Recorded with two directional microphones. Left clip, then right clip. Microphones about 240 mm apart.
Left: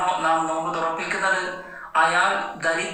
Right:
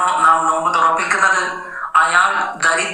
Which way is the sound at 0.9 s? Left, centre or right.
Right.